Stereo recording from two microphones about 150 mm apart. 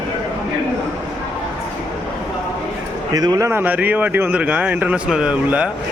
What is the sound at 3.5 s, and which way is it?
A man's voice, 10° right (ahead or behind).